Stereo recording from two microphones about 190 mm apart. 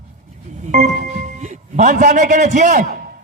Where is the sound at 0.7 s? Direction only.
40° right (ahead or behind).